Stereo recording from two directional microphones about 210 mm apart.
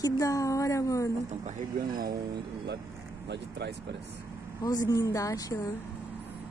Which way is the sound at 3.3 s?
55° right (ahead or behind).